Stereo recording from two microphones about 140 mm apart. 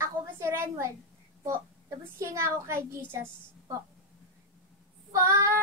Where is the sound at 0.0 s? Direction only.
20° right (ahead or behind).